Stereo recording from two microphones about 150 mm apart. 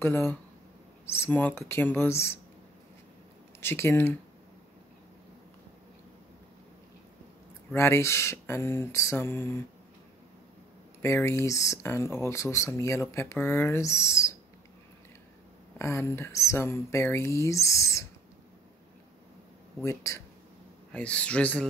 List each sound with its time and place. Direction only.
0.0 s speech: 15° left (ahead or behind)
3.6 s speech: 15° left (ahead or behind)
7.7 s speech: 15° left (ahead or behind)
11.0 s speech: 15° left (ahead or behind)
15.8 s speech: 20° left (ahead or behind)
19.8 s speech: 20° left (ahead or behind)
20.9 s speech: 10° left (ahead or behind)